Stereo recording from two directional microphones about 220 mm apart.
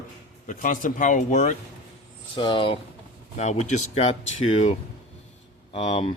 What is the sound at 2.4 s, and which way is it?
Speech, 20° left (ahead or behind).